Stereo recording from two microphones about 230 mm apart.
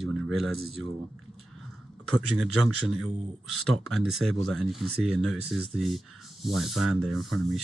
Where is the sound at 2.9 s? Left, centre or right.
Right.